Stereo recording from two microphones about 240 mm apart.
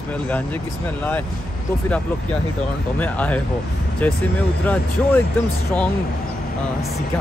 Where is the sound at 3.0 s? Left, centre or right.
Centre.